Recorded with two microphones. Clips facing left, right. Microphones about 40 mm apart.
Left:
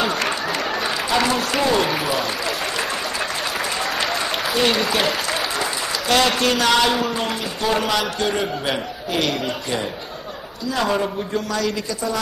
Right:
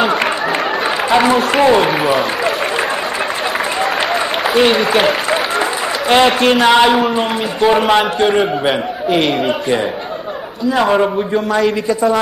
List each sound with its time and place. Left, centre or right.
0.0 s a sound: right
1.1 s a man's voice: right
4.1 s a man's voice: right